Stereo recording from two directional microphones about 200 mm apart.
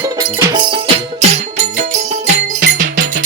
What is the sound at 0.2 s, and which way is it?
Music, 20° right (ahead or behind).